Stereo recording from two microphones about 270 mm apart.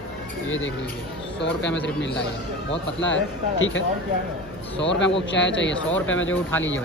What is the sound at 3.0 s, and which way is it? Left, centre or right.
Speech, left.